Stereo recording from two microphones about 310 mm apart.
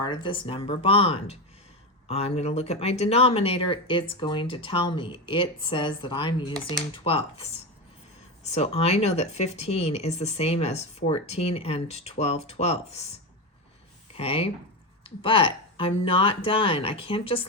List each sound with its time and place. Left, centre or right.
0.0 s speech: centre
8.4 s speech: centre
14.1 s speech: centre